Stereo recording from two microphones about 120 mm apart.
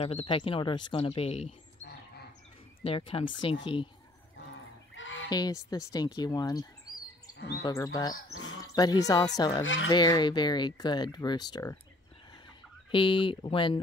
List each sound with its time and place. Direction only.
0.0 s speech: 50° left (ahead or behind)
2.8 s speech: 50° left (ahead or behind)
5.3 s speech: 35° left (ahead or behind)
12.9 s speech: 45° left (ahead or behind)